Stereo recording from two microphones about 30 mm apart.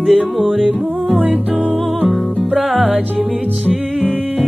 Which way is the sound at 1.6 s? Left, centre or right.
Right.